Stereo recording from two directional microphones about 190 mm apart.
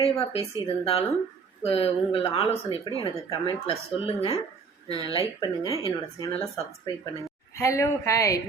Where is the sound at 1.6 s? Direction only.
30° left (ahead or behind).